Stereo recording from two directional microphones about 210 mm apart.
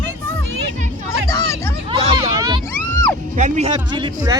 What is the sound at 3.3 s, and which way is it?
Speech, 35° right (ahead or behind).